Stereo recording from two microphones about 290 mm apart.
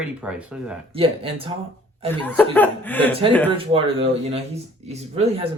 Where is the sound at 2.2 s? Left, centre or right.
Centre.